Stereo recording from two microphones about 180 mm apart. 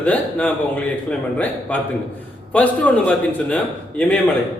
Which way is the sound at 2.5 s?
10° left (ahead or behind).